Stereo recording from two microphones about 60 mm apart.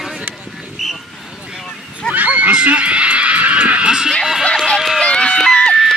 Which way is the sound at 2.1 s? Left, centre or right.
Right.